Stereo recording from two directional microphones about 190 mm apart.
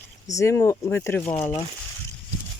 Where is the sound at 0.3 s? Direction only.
15° left (ahead or behind).